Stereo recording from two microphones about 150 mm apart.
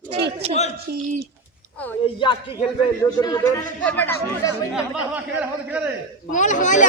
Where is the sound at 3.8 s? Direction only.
10° left (ahead or behind).